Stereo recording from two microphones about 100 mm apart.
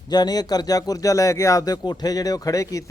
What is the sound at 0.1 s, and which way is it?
A man's voice, 45° left (ahead or behind).